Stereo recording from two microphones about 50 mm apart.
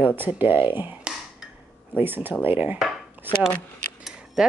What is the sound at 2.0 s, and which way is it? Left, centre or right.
Speech, right.